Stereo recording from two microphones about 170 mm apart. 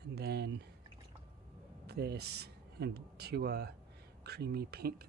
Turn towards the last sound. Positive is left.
turn(degrees=-70)  # may be behind; listen again after turning